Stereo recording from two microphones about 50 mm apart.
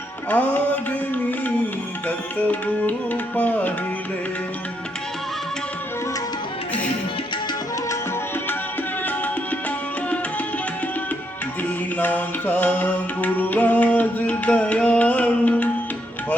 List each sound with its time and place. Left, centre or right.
0.3 s music: left
11.9 s music: left